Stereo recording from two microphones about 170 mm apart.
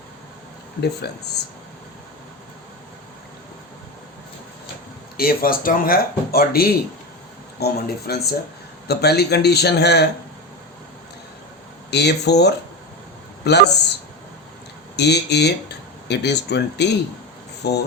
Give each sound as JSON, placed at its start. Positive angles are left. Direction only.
{"t": 1.0, "sound": "speech", "side_deg": 75}
{"t": 5.1, "sound": "speech", "side_deg": 60}
{"t": 11.9, "sound": "a man's voice", "side_deg": 80}
{"t": 14.9, "sound": "speech", "side_deg": 80}